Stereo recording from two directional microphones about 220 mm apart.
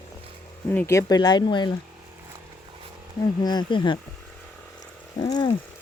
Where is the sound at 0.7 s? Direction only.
10° left (ahead or behind).